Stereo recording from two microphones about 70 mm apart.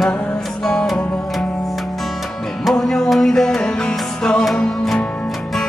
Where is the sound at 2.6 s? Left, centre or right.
Centre.